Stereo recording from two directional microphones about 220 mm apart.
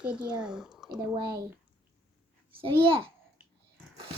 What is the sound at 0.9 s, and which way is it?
Speech, 20° right (ahead or behind).